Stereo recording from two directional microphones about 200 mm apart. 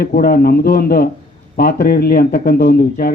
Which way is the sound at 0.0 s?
50° left (ahead or behind).